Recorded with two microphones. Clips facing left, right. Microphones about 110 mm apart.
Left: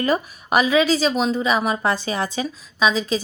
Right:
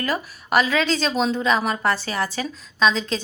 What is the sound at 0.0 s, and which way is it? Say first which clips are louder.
A woman's voice: left 5 dB; 20° left (ahead or behind).